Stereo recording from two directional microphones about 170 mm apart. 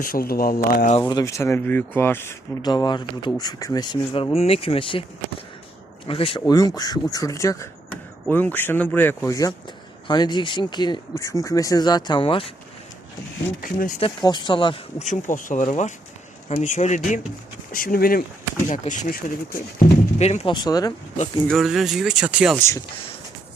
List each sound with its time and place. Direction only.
0.0 s speech: 60° left (ahead or behind)
1.0 s speech: 20° left (ahead or behind)
2.6 s speech: 25° left (ahead or behind)
6.1 s speech: 35° left (ahead or behind)
6.5 s speech: 25° left (ahead or behind)
13.6 s speech: 50° left (ahead or behind)
14.0 s speech: 25° left (ahead or behind)
15.0 s speech: 50° left (ahead or behind)
20.2 s speech: 40° left (ahead or behind)
20.5 s speech: 25° left (ahead or behind)
21.4 s speech: centre (ahead or behind)
22.5 s speech: 15° left (ahead or behind)